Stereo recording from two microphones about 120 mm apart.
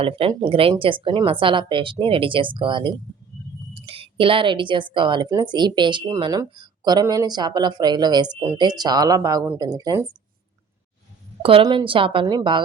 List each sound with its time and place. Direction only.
0.0 s a woman's voice: 45° right (ahead or behind); by 10.0 s 30° right (ahead or behind)
11.6 s a woman's voice: 40° right (ahead or behind)
12.2 s speech: 35° right (ahead or behind)